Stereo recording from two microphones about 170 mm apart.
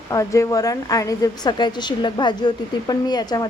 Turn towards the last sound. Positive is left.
turn(degrees=25)  # may be behind; listen again after turning